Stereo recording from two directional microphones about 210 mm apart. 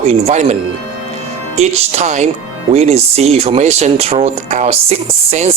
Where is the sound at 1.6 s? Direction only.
30° right (ahead or behind).